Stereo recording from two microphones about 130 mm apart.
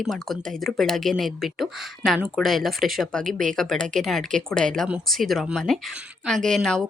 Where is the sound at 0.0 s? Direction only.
Centre (ahead or behind).